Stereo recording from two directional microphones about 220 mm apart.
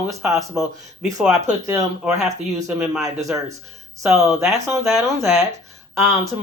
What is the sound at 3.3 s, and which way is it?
Speech, 5° right (ahead or behind).